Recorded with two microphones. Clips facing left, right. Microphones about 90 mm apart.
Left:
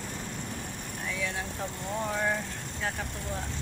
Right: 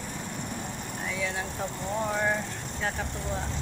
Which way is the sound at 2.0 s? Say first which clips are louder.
Right 2 dB; 20° right (ahead or behind).